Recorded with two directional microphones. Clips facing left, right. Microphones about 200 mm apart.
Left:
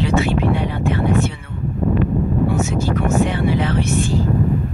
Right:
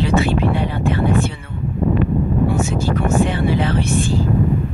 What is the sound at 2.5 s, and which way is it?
Speech, 30° right (ahead or behind).